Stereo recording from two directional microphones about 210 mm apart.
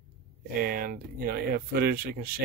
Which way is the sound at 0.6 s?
45° right (ahead or behind).